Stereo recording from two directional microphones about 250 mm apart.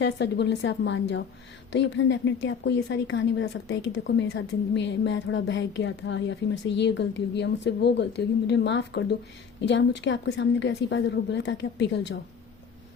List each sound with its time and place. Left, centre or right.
0.0 s speech: left